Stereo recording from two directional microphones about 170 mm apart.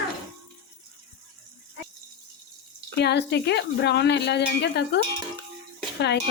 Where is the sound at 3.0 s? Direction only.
80° left.